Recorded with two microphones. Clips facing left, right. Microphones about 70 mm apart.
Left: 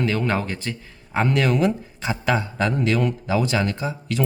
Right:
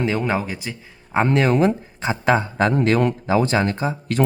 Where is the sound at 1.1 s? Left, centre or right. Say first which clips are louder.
Right 3 dB; right.